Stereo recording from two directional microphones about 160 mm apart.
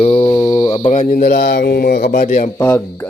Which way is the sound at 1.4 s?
85° left.